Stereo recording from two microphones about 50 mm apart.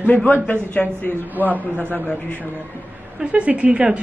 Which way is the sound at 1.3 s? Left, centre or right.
Right.